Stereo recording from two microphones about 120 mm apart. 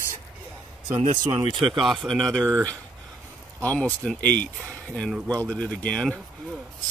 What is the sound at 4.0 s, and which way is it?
Speech, 10° left (ahead or behind).